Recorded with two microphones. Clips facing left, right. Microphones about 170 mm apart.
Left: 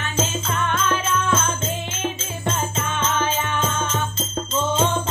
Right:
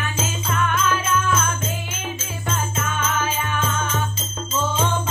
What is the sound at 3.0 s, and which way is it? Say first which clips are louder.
Music: left 2 dB; 10° right (ahead or behind).